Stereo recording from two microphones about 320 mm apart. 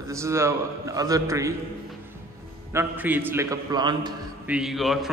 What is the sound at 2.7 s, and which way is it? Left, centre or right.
A man's voice, centre.